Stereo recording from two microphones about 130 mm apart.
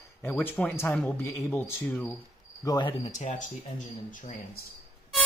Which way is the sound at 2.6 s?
30° left (ahead or behind).